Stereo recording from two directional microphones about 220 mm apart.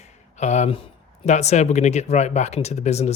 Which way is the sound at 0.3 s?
30° left (ahead or behind).